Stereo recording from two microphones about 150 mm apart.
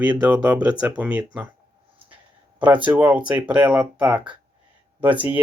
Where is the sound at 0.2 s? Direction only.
10° right (ahead or behind).